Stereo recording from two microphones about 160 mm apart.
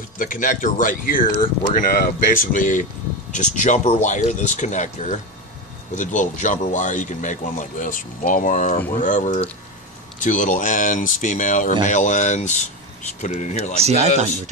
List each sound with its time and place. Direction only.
0.2 s speech: 55° left (ahead or behind)
13.7 s speech: 40° right (ahead or behind)